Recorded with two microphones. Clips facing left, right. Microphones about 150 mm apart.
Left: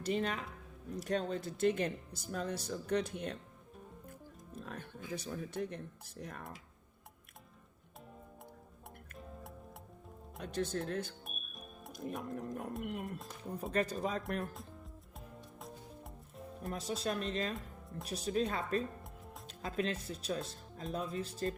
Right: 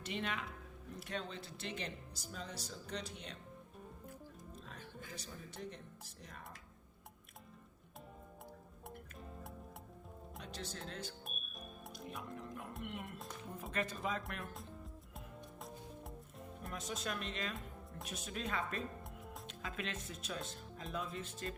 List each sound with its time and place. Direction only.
0.0 s speech: 40° left (ahead or behind)
4.6 s music: 55° left (ahead or behind)
5.1 s speech: 55° left (ahead or behind)
10.4 s speech: 50° left (ahead or behind)
13.1 s speech: centre (ahead or behind)
13.7 s speech: 40° left (ahead or behind)
14.4 s speech: centre (ahead or behind)
16.7 s speech: 35° left (ahead or behind)